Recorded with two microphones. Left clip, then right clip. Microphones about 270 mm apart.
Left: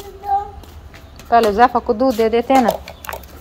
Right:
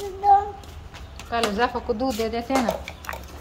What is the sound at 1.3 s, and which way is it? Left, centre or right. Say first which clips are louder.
Speech: left 11 dB; centre.